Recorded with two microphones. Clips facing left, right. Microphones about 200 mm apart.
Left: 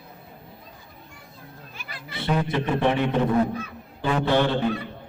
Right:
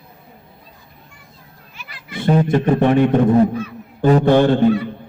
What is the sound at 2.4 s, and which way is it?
Mantra, 45° right (ahead or behind).